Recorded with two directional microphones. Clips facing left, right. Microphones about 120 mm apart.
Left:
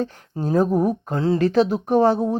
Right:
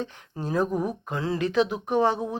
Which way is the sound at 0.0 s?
40° left (ahead or behind).